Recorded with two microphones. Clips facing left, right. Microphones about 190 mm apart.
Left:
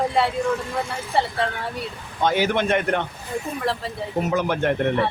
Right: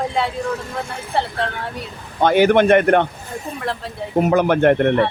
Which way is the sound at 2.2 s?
60° right (ahead or behind).